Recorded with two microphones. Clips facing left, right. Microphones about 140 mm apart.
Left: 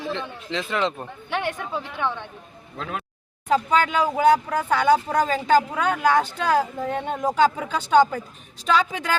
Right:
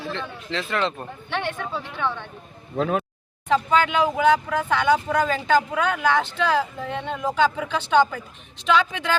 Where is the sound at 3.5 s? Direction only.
40° left (ahead or behind).